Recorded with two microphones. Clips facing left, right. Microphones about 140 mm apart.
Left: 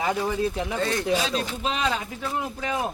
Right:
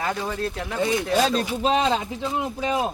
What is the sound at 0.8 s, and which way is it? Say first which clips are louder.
Speech: right 5 dB; 10° right (ahead or behind).